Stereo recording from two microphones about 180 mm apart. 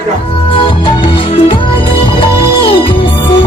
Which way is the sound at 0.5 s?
30° left (ahead or behind).